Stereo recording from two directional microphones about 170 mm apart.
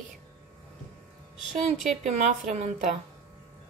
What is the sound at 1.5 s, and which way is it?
A woman's voice, 40° right (ahead or behind).